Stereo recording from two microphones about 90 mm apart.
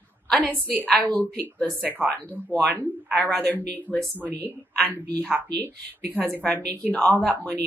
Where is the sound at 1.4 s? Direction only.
25° right (ahead or behind).